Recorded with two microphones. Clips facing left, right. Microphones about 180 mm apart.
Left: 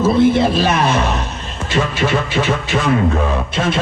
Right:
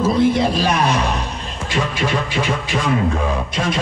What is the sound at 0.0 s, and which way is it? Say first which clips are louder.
A man's voice: left 3 dB; 25° left (ahead or behind).